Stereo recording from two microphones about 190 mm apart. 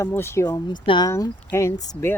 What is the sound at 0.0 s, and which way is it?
Speech, 15° left (ahead or behind).